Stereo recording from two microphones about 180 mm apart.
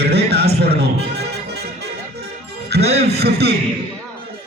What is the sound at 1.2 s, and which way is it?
Music, 65° right (ahead or behind).